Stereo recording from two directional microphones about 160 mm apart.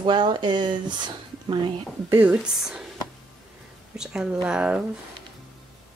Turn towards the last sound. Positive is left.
turn(degrees=-5)  # may be behind; listen again after turning